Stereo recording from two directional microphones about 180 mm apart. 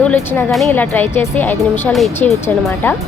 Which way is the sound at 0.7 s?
10° left (ahead or behind).